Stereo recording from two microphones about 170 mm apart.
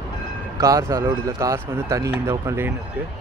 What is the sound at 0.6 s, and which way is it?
Speech, 20° right (ahead or behind).